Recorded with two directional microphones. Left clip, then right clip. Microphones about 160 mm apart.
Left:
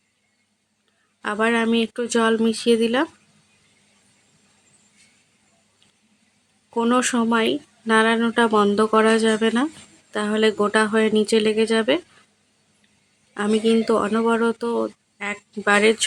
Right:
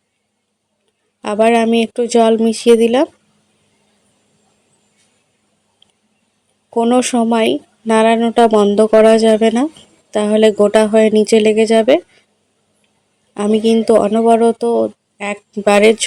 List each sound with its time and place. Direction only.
1.2 s speech: 25° right (ahead or behind)
6.7 s speech: 20° right (ahead or behind)
13.3 s speech: 25° right (ahead or behind)